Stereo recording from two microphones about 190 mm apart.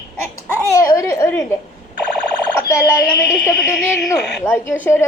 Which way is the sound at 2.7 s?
10° left (ahead or behind).